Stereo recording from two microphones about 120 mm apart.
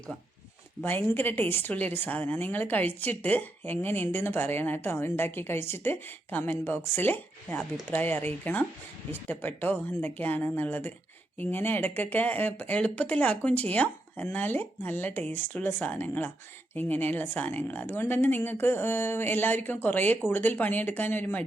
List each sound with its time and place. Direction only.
0.8 s a woman's voice: 15° left (ahead or behind)